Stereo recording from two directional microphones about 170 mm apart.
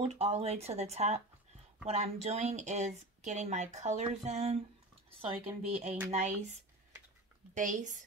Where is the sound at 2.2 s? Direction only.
40° right (ahead or behind).